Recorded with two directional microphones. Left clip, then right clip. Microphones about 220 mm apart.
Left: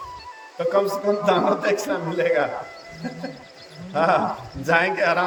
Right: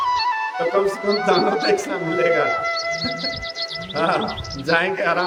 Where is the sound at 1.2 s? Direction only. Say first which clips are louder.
Right 2 dB; centre (ahead or behind).